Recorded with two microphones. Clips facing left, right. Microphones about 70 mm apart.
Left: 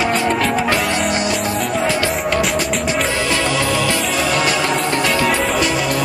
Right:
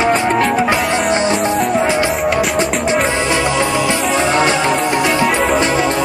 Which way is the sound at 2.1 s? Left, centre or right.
Centre.